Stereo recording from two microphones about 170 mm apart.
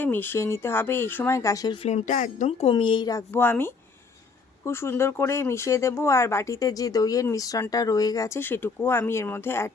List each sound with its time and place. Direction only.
0.0 s speech: 10° left (ahead or behind)
1.8 s speech: 40° left (ahead or behind); by 9.7 s 15° left (ahead or behind)